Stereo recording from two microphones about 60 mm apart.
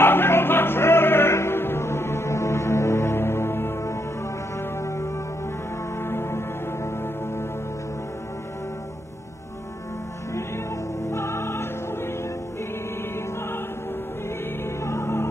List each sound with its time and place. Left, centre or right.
0.0 s music: left
4.8 s music: left
11.1 s music: left
14.8 s music: left